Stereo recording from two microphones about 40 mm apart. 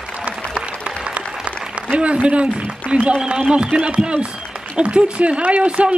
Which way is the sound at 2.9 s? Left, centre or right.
Right.